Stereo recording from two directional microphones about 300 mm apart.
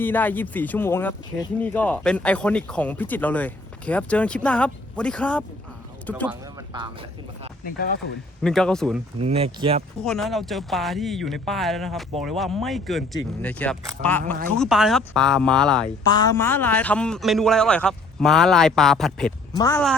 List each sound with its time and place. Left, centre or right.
0.0 s speech: centre
6.2 s speech: centre
7.6 s speech: left
8.4 s speech: centre
9.2 s speech: centre
10.0 s speech: centre
16.0 s speech: centre